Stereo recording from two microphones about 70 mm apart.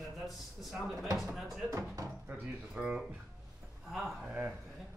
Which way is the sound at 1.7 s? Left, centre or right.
Right.